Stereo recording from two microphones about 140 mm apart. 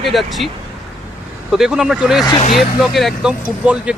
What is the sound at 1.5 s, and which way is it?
Speech, 5° right (ahead or behind).